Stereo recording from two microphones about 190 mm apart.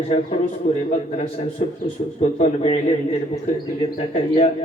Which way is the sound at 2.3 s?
35° left (ahead or behind).